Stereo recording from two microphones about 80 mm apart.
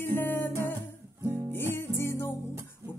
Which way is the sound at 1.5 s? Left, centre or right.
Left.